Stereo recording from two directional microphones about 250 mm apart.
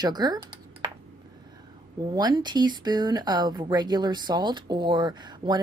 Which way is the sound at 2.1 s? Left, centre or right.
Centre.